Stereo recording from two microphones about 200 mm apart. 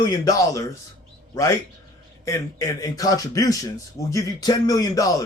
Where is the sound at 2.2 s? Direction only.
15° left (ahead or behind).